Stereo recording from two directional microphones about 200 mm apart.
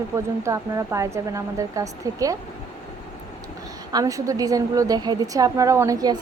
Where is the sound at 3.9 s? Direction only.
20° right (ahead or behind).